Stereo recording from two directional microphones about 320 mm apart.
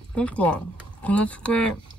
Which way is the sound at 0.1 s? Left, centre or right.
Centre.